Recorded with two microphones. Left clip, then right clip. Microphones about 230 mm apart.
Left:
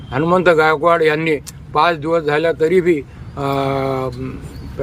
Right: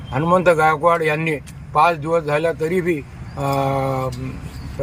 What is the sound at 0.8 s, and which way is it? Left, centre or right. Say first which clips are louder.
Speech: left 3 dB; centre.